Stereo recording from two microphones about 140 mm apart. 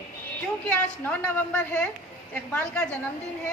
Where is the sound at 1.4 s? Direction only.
10° left (ahead or behind).